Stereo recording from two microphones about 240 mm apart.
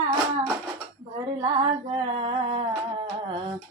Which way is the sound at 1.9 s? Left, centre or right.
Right.